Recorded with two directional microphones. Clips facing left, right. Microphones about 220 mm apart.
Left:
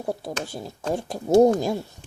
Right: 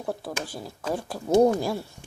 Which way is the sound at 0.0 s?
20° left (ahead or behind).